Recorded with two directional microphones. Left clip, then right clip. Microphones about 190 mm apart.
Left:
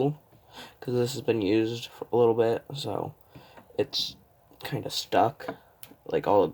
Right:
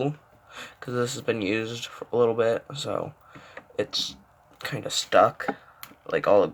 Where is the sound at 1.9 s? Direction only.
15° left (ahead or behind).